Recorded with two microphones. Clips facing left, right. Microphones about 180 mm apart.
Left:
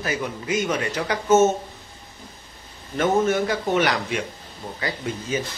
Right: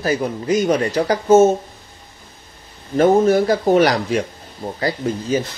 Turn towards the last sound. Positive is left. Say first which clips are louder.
# right 7 dB
turn(degrees=-35)  # may be behind; listen again after turning